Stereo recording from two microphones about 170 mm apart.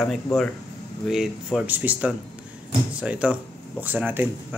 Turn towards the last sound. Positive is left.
turn(degrees=-10)  # may be behind; listen again after turning